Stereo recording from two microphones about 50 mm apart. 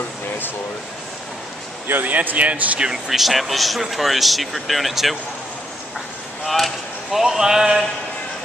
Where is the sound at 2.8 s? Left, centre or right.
Centre.